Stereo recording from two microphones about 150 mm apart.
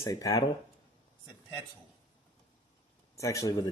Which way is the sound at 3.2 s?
20° left (ahead or behind).